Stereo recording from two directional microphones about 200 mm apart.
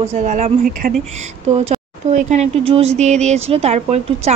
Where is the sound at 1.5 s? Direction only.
30° right (ahead or behind).